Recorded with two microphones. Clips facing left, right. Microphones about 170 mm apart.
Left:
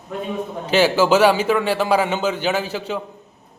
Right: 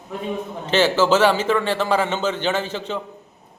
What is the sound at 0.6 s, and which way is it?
A man's voice, 10° left (ahead or behind).